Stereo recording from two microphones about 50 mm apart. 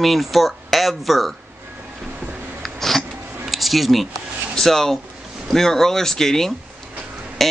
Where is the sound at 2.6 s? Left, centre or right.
Centre.